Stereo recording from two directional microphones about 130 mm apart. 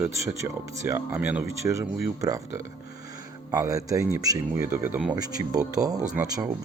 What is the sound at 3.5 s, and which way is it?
Speech, 25° right (ahead or behind).